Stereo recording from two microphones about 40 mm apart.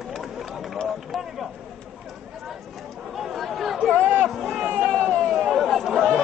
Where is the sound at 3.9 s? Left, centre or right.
Right.